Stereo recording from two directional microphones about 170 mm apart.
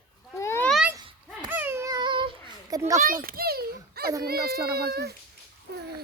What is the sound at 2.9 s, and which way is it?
A child's voice, 55° right (ahead or behind).